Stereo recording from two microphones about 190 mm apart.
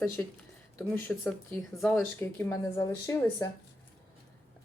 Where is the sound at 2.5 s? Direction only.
15° left (ahead or behind).